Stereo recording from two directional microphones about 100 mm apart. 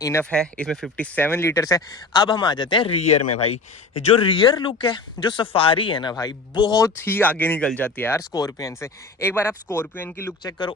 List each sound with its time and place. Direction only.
0.0 s speech: 30° left (ahead or behind)
0.3 s speech: 10° left (ahead or behind)
1.1 s speech: 20° left (ahead or behind)
2.2 s a man's voice: 50° left (ahead or behind)
2.9 s a man's voice: 90° left
4.2 s a man's voice: 50° left (ahead or behind)
6.7 s speech: 30° left (ahead or behind)
8.3 s speech: 35° left (ahead or behind)